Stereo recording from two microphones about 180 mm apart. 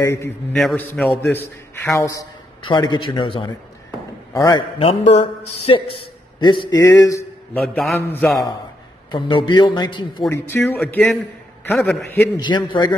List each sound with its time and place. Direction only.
0.0 s a man's voice: 15° left (ahead or behind)
0.5 s a man's voice: 5° left (ahead or behind)
7.6 s a man's voice: centre (ahead or behind)
9.1 s a man's voice: 25° left (ahead or behind)
10.3 s a man's voice: 10° left (ahead or behind)
12.4 s a man's voice: 25° left (ahead or behind)